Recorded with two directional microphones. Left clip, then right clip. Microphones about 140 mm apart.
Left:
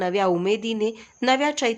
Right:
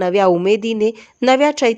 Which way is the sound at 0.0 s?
45° right (ahead or behind).